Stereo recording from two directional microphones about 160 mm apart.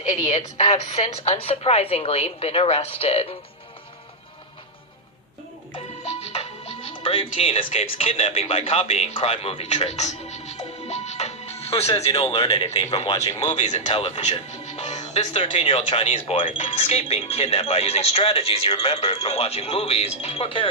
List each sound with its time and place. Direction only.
0.0 s speech: 45° left (ahead or behind)
5.7 s music: 40° left (ahead or behind)
6.9 s speech: 30° left (ahead or behind)